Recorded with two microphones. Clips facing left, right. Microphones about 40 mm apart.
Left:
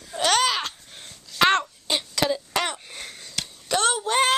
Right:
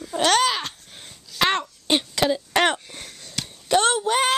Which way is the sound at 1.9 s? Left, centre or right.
Right.